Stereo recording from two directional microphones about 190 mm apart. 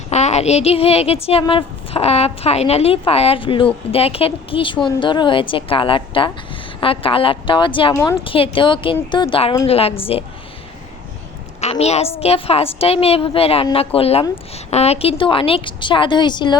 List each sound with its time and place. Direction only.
0.1 s a woman's voice: 35° left (ahead or behind)
11.6 s a woman's voice: 35° left (ahead or behind)